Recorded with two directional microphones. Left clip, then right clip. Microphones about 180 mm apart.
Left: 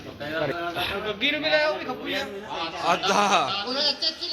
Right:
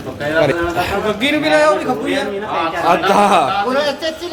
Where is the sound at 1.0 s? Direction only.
70° right (ahead or behind).